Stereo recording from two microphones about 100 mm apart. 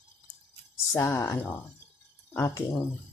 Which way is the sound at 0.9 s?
30° left (ahead or behind).